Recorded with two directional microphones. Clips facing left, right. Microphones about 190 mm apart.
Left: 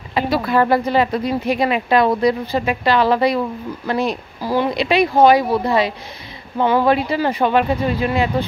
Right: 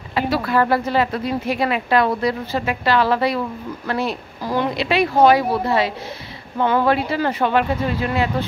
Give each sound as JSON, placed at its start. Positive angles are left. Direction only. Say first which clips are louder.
{"t": 0.1, "sound": "speech", "louder": "left 2 dB", "side_deg": 20}